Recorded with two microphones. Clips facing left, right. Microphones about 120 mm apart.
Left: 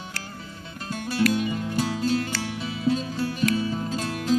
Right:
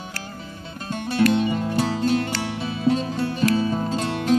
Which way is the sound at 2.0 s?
55° right (ahead or behind).